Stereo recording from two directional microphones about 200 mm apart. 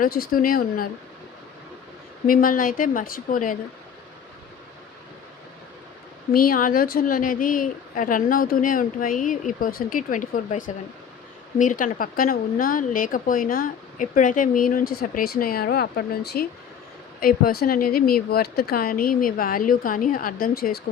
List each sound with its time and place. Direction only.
0.0 s speech: 45° left (ahead or behind)
2.2 s speech: 45° left (ahead or behind)
6.3 s speech: 45° left (ahead or behind)
11.6 s speech: 40° left (ahead or behind)